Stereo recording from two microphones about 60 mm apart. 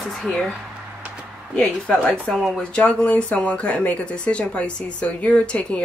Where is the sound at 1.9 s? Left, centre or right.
Centre.